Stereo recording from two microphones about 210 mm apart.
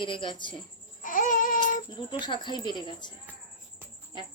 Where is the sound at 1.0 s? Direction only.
40° left (ahead or behind).